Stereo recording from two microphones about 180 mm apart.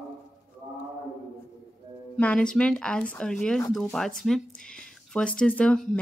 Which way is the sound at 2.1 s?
5° left (ahead or behind).